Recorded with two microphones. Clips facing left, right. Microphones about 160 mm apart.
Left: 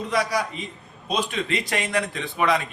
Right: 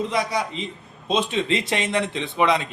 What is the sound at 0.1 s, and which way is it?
A man's voice, 25° right (ahead or behind).